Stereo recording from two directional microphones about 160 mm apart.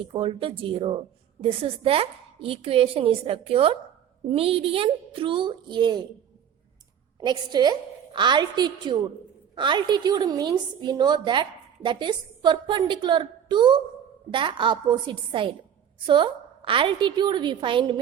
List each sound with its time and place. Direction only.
0.0 s a woman's voice: 35° right (ahead or behind)
7.2 s a woman's voice: 25° right (ahead or behind)